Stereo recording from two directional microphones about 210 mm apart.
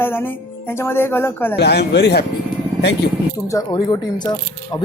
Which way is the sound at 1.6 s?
50° left (ahead or behind).